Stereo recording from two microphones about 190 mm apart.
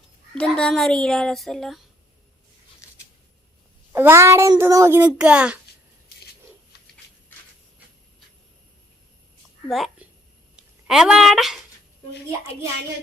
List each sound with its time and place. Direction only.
0.3 s a child's voice: 5° left (ahead or behind)
3.9 s a child's voice: 15° right (ahead or behind)
6.7 s a sound: 60° left (ahead or behind)
9.6 s a woman's voice: centre (ahead or behind)